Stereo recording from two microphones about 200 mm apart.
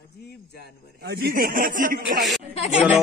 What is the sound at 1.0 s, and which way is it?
Speech, 50° right (ahead or behind).